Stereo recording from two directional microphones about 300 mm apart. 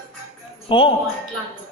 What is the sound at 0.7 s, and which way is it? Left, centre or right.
Speech, centre.